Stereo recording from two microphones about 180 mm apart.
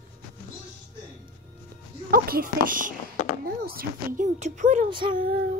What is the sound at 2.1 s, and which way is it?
Speech, 55° right (ahead or behind).